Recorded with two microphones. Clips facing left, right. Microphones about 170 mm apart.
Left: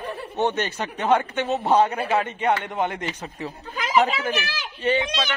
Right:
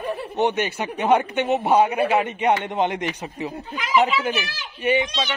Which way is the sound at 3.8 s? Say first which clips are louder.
Right 1 dB; 40° left (ahead or behind).